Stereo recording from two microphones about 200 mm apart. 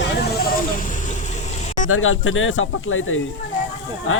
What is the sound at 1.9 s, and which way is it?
Speech, 90° left.